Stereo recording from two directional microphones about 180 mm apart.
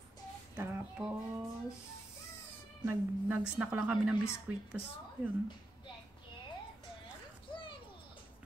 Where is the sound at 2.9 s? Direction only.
10° right (ahead or behind).